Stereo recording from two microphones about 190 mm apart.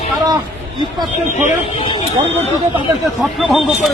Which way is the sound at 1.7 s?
30° left (ahead or behind).